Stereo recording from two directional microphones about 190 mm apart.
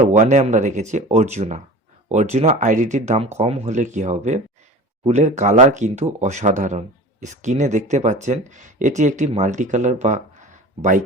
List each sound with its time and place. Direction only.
0.0 s speech: 40° right (ahead or behind)